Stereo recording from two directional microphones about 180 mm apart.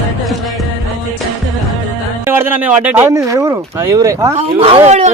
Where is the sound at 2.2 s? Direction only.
10° right (ahead or behind).